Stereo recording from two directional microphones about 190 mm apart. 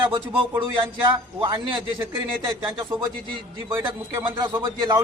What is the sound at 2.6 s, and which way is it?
Speech, 20° right (ahead or behind).